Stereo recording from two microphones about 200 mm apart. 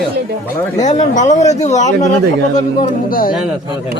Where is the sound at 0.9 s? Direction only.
35° left (ahead or behind).